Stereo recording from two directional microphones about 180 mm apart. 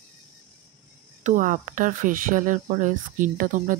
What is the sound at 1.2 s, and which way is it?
Speech, 45° right (ahead or behind).